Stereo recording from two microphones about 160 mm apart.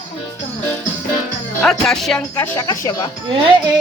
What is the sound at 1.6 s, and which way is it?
Speech, centre (ahead or behind).